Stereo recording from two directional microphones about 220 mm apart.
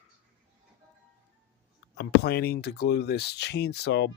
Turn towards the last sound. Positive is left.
turn(degrees=50)  # may be behind; listen again after turning